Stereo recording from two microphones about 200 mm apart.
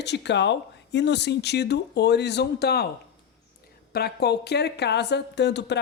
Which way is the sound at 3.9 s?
55° left (ahead or behind).